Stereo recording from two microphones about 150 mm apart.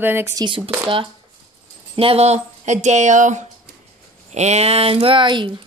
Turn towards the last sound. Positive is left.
turn(degrees=-30)  # may be behind; listen again after turning